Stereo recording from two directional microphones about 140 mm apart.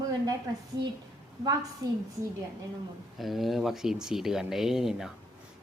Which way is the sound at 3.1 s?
Centre (ahead or behind).